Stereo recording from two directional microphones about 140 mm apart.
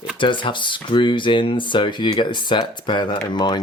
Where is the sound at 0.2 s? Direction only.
35° left (ahead or behind).